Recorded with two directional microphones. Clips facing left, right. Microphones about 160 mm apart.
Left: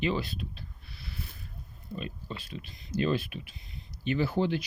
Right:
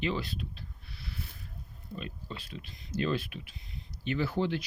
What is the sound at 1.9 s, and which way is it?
Speech, 5° left (ahead or behind).